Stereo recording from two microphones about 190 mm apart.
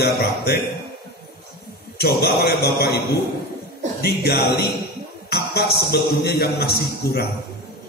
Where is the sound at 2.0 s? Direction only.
55° left (ahead or behind).